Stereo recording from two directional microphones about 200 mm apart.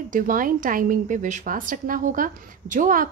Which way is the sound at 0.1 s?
45° right (ahead or behind).